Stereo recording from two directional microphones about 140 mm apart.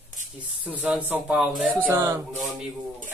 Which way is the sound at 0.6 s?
10° right (ahead or behind).